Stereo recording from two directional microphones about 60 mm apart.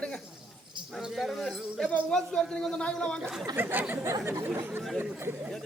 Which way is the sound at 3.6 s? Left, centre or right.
Right.